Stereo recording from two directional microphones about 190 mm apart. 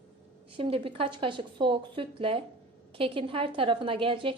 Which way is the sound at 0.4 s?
30° right (ahead or behind).